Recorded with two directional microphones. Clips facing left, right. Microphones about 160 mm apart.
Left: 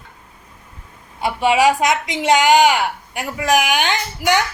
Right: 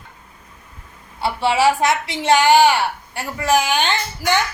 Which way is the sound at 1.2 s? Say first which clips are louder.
Left 2 dB; 15° left (ahead or behind).